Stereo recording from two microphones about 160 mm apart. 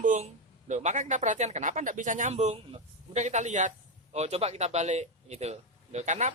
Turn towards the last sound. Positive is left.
turn(degrees=-45)  # may be behind; listen again after turning